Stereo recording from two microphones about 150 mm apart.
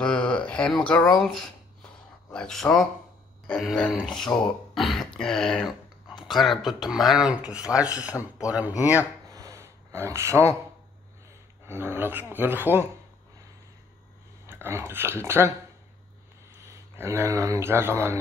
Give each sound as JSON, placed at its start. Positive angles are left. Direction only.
{"t": 0.0, "sound": "a sound", "side_deg": 10}
{"t": 2.3, "sound": "speech", "side_deg": 5}
{"t": 9.3, "sound": "gasp", "side_deg": -20}
{"t": 11.6, "sound": "speech", "side_deg": -15}
{"t": 14.4, "sound": "speech", "side_deg": -15}
{"t": 16.6, "sound": "speech", "side_deg": -20}